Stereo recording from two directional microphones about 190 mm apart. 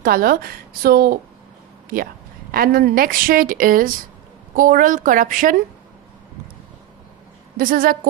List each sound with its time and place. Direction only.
0.0 s speech: 50° right (ahead or behind)
2.5 s speech: 50° right (ahead or behind)
7.5 s speech: 50° right (ahead or behind)